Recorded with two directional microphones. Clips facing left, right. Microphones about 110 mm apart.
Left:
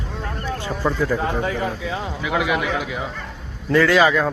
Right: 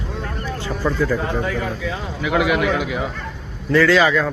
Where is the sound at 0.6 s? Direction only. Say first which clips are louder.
Right 1 dB; 25° left (ahead or behind).